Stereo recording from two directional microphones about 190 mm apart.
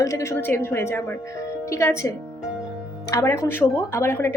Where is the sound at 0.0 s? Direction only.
15° left (ahead or behind).